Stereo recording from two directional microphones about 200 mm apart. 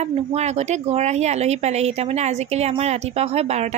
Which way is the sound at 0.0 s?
35° right (ahead or behind).